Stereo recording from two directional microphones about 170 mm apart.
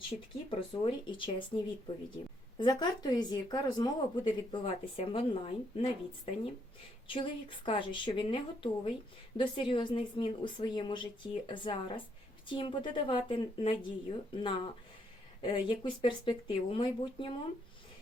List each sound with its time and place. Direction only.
0.5 s speech: 30° left (ahead or behind)
7.1 s speech: 30° left (ahead or behind)